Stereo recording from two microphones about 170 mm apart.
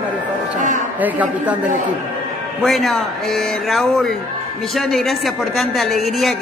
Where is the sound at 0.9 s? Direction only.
10° right (ahead or behind).